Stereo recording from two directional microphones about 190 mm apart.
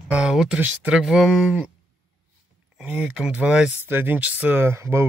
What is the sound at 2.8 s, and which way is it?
Speech, 5° right (ahead or behind).